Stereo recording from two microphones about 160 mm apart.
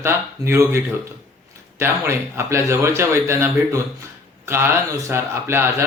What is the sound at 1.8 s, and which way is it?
Speech, 15° right (ahead or behind).